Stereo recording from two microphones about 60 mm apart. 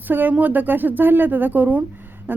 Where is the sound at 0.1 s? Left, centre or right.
Right.